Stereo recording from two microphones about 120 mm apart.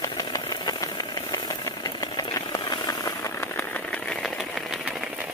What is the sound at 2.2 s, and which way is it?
Vehicle, 35° left (ahead or behind).